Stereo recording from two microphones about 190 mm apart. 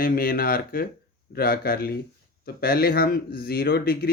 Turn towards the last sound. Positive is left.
turn(degrees=55)  # may be behind; listen again after turning